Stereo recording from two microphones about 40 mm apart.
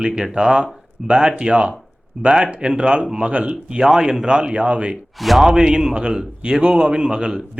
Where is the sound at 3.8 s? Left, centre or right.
Centre; by 4.9 s right.